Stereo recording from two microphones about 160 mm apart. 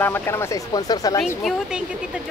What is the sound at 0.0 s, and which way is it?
Speech, 15° left (ahead or behind).